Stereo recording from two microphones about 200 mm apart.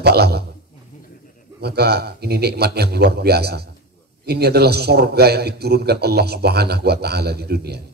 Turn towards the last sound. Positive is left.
turn(degrees=-55)  # may be behind; listen again after turning